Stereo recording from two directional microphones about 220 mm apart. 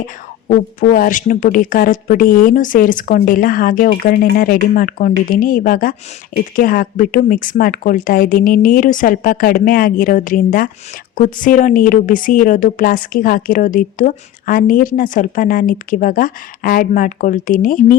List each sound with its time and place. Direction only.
0.4 s speech: 40° left (ahead or behind)